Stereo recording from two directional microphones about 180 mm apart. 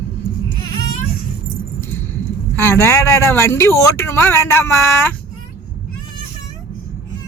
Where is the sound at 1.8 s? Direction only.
10° left (ahead or behind).